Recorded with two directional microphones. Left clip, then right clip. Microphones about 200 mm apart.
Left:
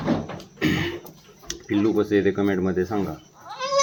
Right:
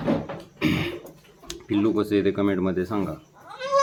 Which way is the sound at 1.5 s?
5° right (ahead or behind).